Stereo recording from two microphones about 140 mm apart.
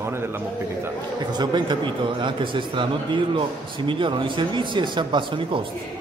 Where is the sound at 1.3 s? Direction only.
30° right (ahead or behind).